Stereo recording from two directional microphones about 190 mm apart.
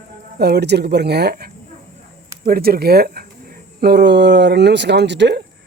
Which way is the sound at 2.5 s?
55° right (ahead or behind).